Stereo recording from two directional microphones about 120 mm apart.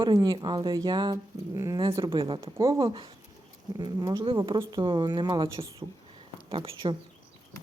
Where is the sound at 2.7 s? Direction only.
45° right (ahead or behind).